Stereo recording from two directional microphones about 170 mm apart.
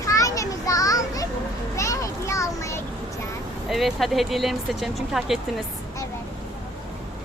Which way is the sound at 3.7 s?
Centre (ahead or behind).